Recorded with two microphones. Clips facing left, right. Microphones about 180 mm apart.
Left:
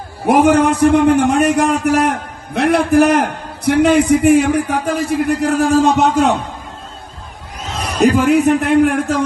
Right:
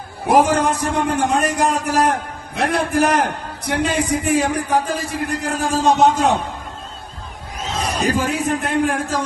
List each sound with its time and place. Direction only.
0.3 s a man's voice: 60° left (ahead or behind)
7.9 s a man's voice: 65° left (ahead or behind)